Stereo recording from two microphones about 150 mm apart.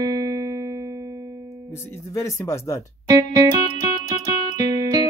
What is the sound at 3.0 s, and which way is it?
Music, 25° right (ahead or behind).